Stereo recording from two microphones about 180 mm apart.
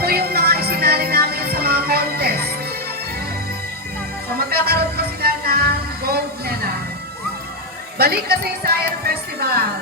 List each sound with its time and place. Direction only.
0.0 s music: 60° right (ahead or behind)
4.4 s music: 60° right (ahead or behind)
7.9 s speech: 60° right (ahead or behind)